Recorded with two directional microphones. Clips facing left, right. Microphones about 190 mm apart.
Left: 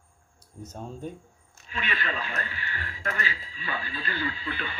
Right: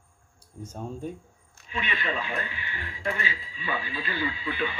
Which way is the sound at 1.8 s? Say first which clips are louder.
Right 1 dB; 20° right (ahead or behind).